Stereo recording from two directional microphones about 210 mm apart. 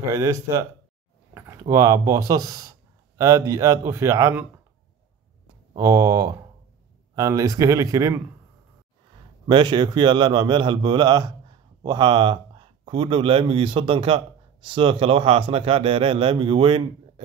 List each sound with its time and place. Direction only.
0.1 s a man's voice: 15° right (ahead or behind)
5.8 s a man's voice: 15° right (ahead or behind)
9.5 s speech: 20° right (ahead or behind)